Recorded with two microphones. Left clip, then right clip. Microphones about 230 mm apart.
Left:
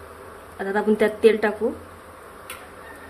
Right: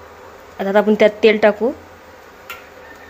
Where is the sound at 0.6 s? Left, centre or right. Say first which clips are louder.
Right 8 dB; right.